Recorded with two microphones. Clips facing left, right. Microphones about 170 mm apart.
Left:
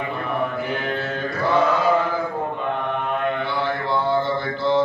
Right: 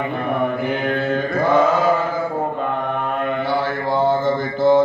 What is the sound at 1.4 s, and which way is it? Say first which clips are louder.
Chant: right 3 dB; 50° right (ahead or behind).